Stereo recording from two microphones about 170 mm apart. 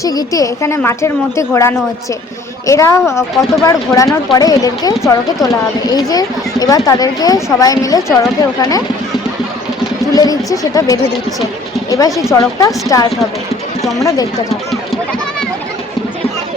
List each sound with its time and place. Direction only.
0.0 s a woman's voice: 20° left (ahead or behind)
10.2 s speech: 20° left (ahead or behind)